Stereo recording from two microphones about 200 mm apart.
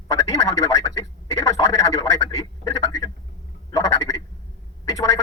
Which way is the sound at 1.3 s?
15° left (ahead or behind).